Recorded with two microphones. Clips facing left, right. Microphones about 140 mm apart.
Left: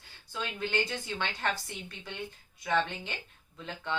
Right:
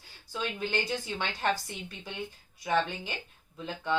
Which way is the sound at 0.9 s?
20° right (ahead or behind).